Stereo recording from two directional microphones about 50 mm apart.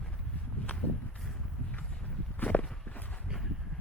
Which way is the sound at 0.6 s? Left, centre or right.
Left.